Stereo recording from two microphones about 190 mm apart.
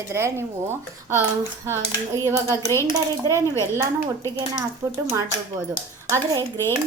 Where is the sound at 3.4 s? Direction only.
15° left (ahead or behind).